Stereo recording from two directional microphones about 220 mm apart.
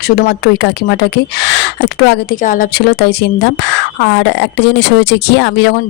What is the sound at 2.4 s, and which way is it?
Speech, 40° left (ahead or behind).